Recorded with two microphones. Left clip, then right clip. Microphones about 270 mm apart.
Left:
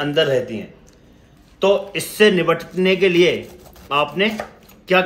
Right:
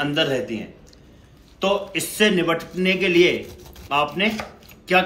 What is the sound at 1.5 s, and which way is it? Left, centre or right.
A man's voice, left.